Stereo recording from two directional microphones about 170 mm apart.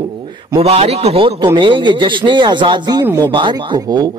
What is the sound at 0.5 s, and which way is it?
A man's voice, 35° right (ahead or behind).